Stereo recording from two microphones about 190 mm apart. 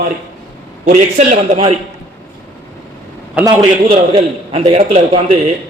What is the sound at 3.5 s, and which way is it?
A man's voice, 25° right (ahead or behind).